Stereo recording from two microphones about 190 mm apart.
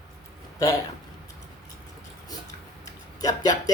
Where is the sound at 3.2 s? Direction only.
20° left (ahead or behind).